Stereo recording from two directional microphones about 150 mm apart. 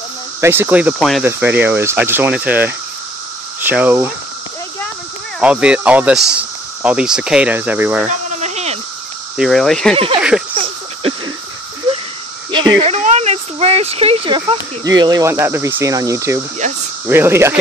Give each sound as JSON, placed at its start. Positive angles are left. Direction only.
{"t": 0.4, "sound": "speech", "side_deg": -15}
{"t": 0.9, "sound": "speech", "side_deg": 0}
{"t": 1.2, "sound": "speech", "side_deg": -10}
{"t": 5.4, "sound": "speech", "side_deg": -5}
{"t": 8.4, "sound": "a sound", "side_deg": -50}
{"t": 9.4, "sound": "speech", "side_deg": 0}
{"t": 9.9, "sound": "speech", "side_deg": -40}
{"t": 10.5, "sound": "a sound", "side_deg": -35}
{"t": 12.4, "sound": "a sound", "side_deg": -30}
{"t": 12.9, "sound": "speech", "side_deg": -50}
{"t": 14.9, "sound": "speech", "side_deg": -25}